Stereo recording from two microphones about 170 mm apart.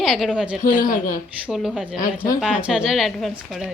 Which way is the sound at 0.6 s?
50° left (ahead or behind).